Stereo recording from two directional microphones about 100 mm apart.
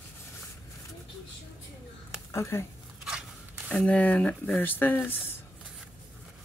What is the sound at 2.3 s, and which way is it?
Speech, 25° left (ahead or behind).